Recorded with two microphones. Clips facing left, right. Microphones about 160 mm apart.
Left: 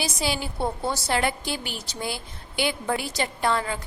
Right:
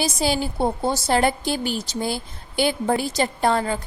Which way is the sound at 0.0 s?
45° right (ahead or behind).